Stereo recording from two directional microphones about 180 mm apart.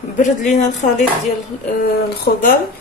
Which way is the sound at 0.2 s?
40° left (ahead or behind).